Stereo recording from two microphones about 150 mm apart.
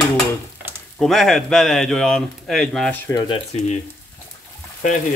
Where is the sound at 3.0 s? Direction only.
25° left (ahead or behind).